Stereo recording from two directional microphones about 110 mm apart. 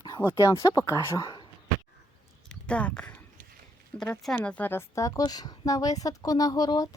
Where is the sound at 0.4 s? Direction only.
30° left (ahead or behind).